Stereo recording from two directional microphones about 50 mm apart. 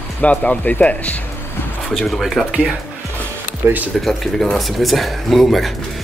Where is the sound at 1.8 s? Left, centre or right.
Centre.